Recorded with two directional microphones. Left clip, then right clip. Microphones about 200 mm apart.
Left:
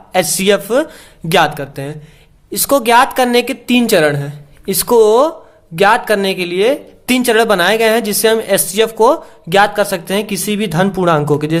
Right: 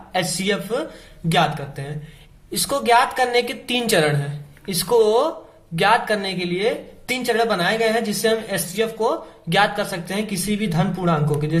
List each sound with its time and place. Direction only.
0.1 s a woman's voice: 40° left (ahead or behind)